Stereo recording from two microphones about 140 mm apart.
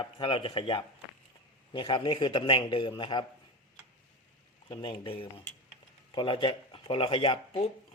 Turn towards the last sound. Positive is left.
turn(degrees=40)  # may be behind; listen again after turning